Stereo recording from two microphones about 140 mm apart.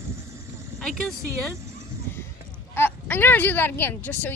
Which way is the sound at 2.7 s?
15° left (ahead or behind).